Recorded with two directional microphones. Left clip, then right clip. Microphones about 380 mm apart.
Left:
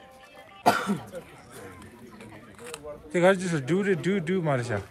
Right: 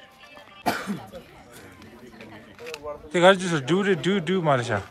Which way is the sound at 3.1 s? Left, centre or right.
Centre.